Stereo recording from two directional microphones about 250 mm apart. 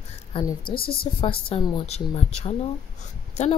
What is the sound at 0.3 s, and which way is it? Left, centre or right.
Speech, centre.